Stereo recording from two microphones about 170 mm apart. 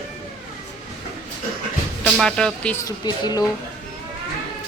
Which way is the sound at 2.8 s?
25° left (ahead or behind).